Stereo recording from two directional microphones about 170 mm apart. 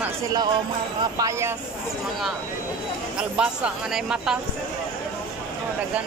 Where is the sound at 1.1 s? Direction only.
20° right (ahead or behind).